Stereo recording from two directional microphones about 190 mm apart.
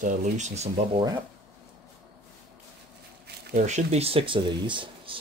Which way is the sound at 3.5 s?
40° right (ahead or behind).